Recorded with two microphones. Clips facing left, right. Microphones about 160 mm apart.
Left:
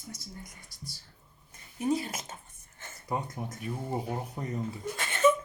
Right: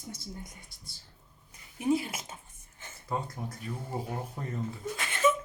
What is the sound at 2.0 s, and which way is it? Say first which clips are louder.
Speech: left 1 dB; 10° right (ahead or behind).